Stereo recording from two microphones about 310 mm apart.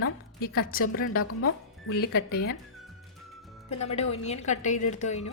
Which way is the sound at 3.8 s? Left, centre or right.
Centre.